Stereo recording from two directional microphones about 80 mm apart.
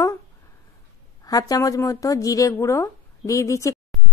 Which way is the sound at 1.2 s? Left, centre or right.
Left.